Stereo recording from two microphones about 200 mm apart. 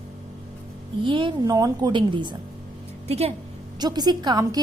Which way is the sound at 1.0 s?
25° right (ahead or behind).